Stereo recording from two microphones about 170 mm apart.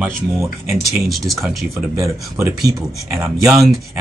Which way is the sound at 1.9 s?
15° right (ahead or behind).